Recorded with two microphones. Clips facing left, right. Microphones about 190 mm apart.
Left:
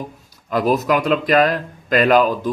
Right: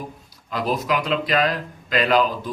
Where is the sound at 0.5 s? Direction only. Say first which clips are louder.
Left 6 dB; 45° left (ahead or behind).